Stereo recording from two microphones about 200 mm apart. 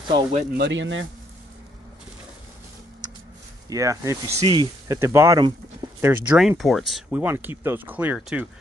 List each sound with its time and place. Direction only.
0.1 s speech: 30° right (ahead or behind)
0.6 s speech: 65° right (ahead or behind)
3.0 s a sound: 20° right (ahead or behind)
3.6 s speech: 15° right (ahead or behind)
6.6 s speech: centre (ahead or behind)